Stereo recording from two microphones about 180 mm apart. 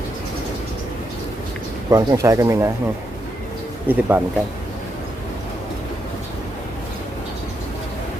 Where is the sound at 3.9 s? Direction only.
10° right (ahead or behind).